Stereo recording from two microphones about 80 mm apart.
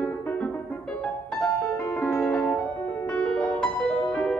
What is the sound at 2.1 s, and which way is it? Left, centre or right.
Music, centre.